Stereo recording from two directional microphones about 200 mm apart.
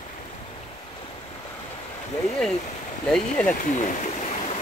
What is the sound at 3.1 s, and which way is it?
Speech, 5° left (ahead or behind).